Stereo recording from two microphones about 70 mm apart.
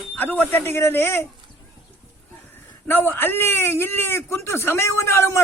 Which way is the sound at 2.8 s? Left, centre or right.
Left.